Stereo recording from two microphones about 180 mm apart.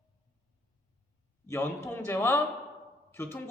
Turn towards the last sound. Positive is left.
turn(degrees=10)  # may be behind; listen again after turning